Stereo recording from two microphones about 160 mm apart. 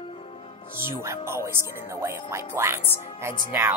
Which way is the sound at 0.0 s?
35° left (ahead or behind).